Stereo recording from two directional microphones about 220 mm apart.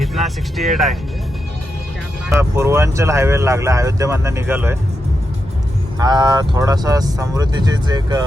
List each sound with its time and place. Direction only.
0.0 s speech: centre (ahead or behind)
2.3 s speech: 10° right (ahead or behind)
6.0 s speech: 20° right (ahead or behind)